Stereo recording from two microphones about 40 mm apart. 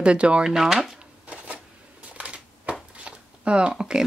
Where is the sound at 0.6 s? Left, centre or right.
Centre.